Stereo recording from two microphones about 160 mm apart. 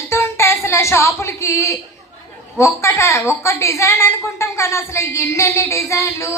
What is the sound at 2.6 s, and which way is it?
A woman's voice, 15° left (ahead or behind).